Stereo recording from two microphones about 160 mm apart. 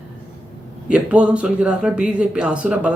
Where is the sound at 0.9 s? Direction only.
5° right (ahead or behind).